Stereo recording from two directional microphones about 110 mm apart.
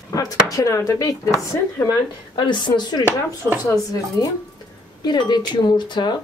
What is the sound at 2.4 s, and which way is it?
Speech, 45° left (ahead or behind).